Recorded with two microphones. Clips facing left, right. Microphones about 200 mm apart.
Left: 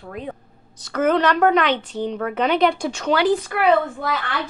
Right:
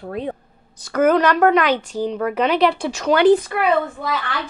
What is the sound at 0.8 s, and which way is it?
A woman's voice, 10° right (ahead or behind).